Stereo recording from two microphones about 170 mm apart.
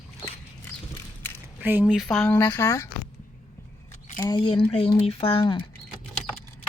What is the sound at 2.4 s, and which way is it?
Speech, 20° left (ahead or behind).